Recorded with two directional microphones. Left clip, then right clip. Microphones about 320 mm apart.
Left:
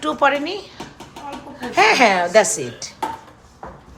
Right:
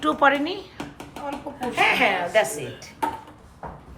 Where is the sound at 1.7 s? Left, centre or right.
Centre.